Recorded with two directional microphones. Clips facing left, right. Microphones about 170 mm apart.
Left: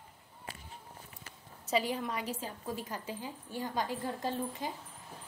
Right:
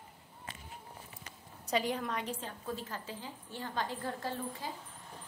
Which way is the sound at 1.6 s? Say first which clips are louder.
Left 1 dB; 5° left (ahead or behind).